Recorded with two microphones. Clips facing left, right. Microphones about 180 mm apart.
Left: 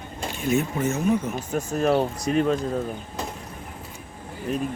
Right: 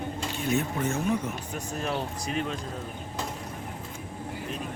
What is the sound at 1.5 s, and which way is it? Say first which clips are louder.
Speech: left 12 dB; 45° left (ahead or behind).